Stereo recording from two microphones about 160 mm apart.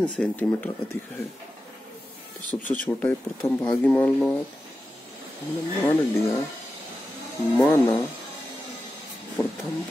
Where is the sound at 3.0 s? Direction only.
10° left (ahead or behind).